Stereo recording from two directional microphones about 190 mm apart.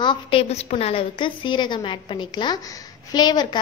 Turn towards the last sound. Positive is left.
turn(degrees=20)  # may be behind; listen again after turning